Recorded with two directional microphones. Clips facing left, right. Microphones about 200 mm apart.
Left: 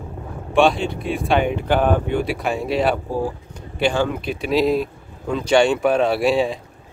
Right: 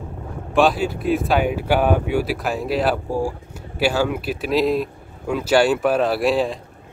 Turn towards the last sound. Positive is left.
turn(degrees=0)  # may be behind; listen again after turning